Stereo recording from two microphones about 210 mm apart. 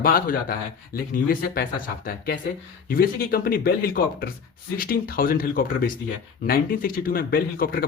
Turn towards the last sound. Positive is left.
turn(degrees=45)  # may be behind; listen again after turning